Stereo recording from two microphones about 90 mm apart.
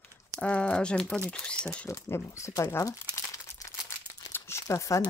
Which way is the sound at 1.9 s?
35° left (ahead or behind).